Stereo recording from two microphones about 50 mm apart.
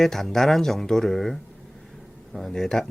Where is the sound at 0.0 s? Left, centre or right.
Centre.